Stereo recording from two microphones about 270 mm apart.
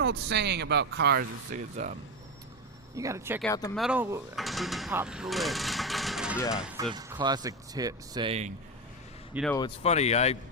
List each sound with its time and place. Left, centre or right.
0.0 s speech: right
2.9 s speech: centre
3.4 s speech: centre
3.8 s speech: centre
6.9 s speech: centre
9.3 s speech: centre
9.6 s speech: left